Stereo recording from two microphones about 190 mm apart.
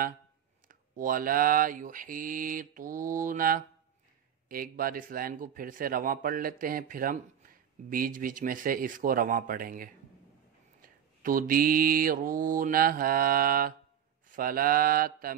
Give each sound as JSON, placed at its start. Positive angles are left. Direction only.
{"t": 0.7, "sound": "a man's voice", "side_deg": -45}